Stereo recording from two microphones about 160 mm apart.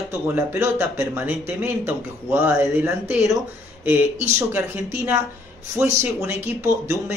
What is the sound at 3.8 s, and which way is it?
Speech, 10° right (ahead or behind).